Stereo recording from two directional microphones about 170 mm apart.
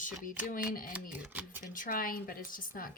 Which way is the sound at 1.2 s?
10° right (ahead or behind).